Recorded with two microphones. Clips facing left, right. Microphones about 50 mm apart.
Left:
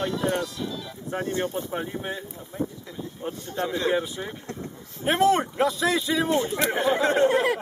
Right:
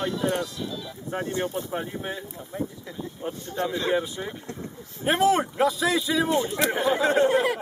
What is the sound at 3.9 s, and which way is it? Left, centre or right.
Speech, centre.